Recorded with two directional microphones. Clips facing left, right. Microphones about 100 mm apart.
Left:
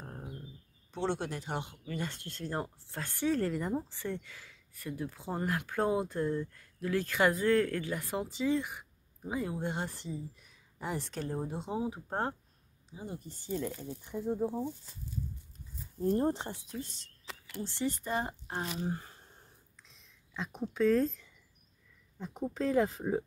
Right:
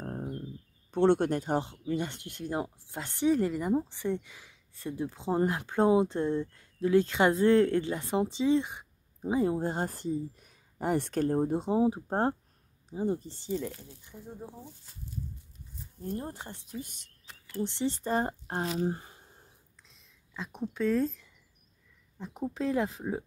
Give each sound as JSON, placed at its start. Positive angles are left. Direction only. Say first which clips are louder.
{"t": 0.9, "sound": "speech", "louder": "right 10 dB", "side_deg": -55}
{"t": 1.6, "sound": "speech", "louder": "right 6 dB", "side_deg": -25}
{"t": 11.7, "sound": "speech", "louder": "right 7 dB", "side_deg": -30}
{"t": 12.9, "sound": "speech", "louder": "right 12 dB", "side_deg": -45}
{"t": 14.0, "sound": "speech", "louder": "left 12 dB", "side_deg": 90}
{"t": 16.0, "sound": "speech", "louder": "left 8 dB", "side_deg": 35}
{"t": 16.8, "sound": "speech", "louder": "even", "side_deg": -15}
{"t": 17.2, "sound": "a sound", "louder": "left 5 dB", "side_deg": 90}
{"t": 17.6, "sound": "speech", "louder": "right 4 dB", "side_deg": -20}
{"t": 18.9, "sound": "a sound", "louder": "left 1 dB", "side_deg": -15}
{"t": 19.8, "sound": "a sound", "louder": "even", "side_deg": 0}
{"t": 22.2, "sound": "speech", "louder": "right 1 dB", "side_deg": 0}